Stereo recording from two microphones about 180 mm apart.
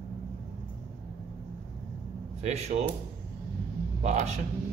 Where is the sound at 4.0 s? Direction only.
40° right (ahead or behind).